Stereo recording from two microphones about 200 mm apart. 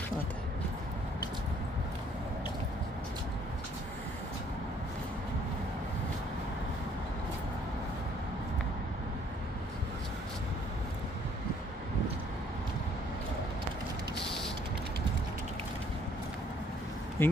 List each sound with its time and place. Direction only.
17.2 s speech: 10° left (ahead or behind)